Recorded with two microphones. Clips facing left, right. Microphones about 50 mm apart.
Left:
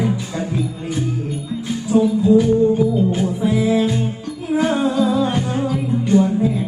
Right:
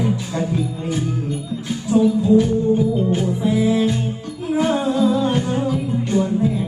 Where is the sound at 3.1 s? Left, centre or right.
Centre.